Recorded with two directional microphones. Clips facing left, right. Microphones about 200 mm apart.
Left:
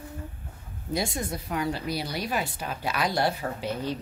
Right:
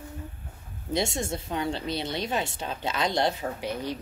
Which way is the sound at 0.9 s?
25° right (ahead or behind).